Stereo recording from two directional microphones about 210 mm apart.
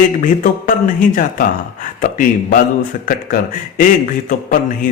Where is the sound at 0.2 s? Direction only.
40° left (ahead or behind).